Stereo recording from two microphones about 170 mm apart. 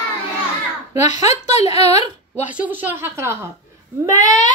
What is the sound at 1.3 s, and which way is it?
Speech, 40° left (ahead or behind).